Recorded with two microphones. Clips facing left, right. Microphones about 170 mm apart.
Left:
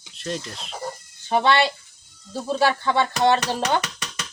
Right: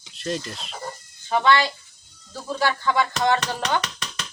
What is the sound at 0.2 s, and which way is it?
Speech, centre (ahead or behind).